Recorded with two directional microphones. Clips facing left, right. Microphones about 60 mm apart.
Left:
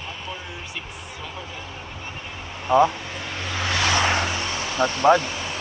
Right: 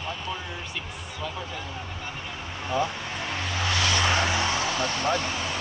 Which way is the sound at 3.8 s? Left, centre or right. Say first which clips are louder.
Left 5 dB; left.